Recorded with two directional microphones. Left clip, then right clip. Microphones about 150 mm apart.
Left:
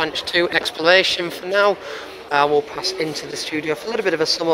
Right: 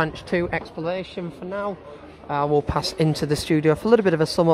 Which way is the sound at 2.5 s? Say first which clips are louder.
Left 2 dB; 35° right (ahead or behind).